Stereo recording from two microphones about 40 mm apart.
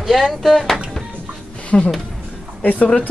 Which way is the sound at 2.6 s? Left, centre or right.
Left.